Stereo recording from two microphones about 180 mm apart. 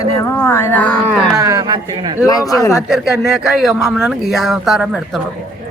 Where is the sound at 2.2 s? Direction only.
20° left (ahead or behind).